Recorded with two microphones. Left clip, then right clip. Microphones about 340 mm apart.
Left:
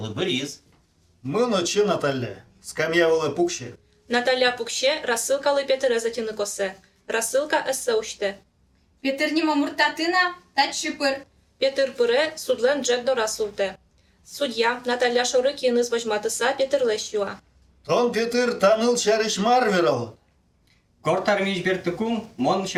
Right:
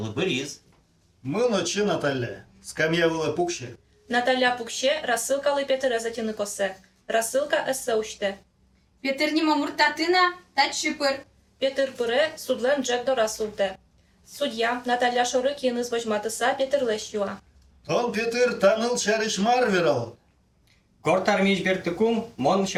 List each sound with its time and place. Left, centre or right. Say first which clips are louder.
1.3 s a man's voice: left 2 dB; left
4.1 s a woman's voice: left 1 dB; left
9.0 s a woman's voice: left 1 dB; left
11.6 s a woman's voice: left 4 dB; left
17.8 s a man's voice: left 3 dB; left
21.0 s speech: even; centre